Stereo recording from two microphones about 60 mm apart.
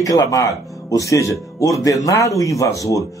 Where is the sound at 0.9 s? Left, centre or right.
Left.